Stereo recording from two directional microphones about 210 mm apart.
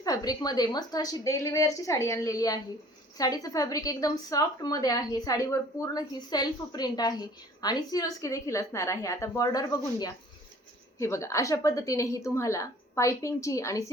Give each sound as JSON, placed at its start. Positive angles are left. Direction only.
{"t": 0.0, "sound": "a woman's voice", "side_deg": 15}